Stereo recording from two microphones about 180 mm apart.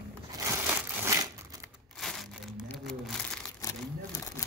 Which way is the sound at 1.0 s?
20° right (ahead or behind).